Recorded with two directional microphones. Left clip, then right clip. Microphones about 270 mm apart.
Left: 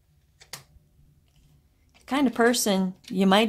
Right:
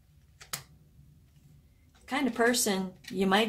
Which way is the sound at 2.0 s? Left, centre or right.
Left.